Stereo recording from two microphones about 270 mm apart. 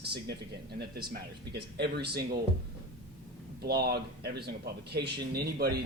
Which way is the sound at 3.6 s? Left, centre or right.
Right.